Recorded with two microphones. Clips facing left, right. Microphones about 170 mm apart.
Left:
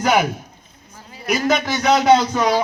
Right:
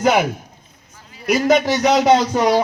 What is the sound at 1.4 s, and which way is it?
Speech, 15° right (ahead or behind).